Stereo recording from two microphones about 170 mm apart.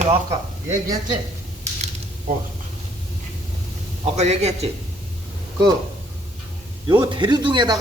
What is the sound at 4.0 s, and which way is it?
Speech, 40° right (ahead or behind).